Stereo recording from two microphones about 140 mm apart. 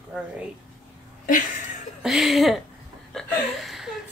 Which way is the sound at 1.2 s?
70° left (ahead or behind).